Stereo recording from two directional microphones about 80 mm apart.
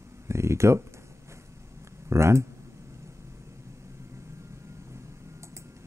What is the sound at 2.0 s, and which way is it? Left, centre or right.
Speech, right.